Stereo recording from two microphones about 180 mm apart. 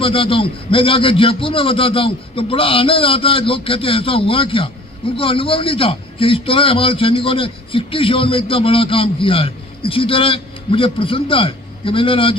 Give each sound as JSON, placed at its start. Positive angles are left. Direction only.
{"t": 0.0, "sound": "a man's voice", "side_deg": 30}